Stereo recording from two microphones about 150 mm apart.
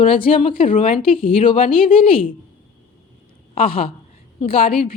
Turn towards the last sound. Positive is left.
turn(degrees=40)  # may be behind; listen again after turning